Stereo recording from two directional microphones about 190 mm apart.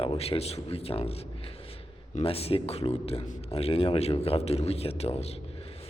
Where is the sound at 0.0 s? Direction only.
30° left (ahead or behind).